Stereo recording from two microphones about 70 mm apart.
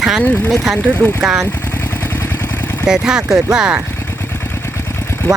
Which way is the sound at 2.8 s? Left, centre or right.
Centre.